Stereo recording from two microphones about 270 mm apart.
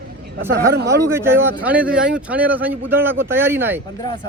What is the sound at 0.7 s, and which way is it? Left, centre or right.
Speech, right.